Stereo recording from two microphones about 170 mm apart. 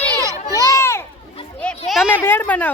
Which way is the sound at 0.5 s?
20° left (ahead or behind).